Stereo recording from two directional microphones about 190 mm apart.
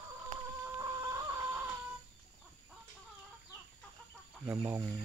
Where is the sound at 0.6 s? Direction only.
15° right (ahead or behind).